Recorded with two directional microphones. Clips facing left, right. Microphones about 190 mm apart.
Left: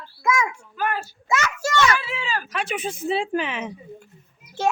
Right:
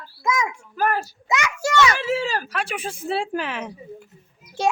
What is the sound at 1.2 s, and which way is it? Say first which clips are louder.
Speech: left 1 dB; 15° right (ahead or behind).